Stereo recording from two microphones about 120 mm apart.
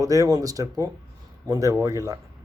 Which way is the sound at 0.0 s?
30° right (ahead or behind).